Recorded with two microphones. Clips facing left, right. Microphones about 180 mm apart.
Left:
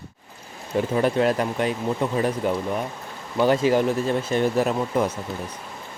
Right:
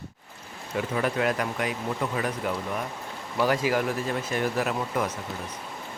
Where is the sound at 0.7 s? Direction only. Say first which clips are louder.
Left 6 dB; 30° left (ahead or behind).